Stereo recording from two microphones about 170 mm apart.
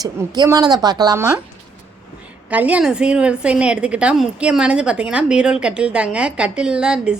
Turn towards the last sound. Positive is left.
turn(degrees=-5)  # may be behind; listen again after turning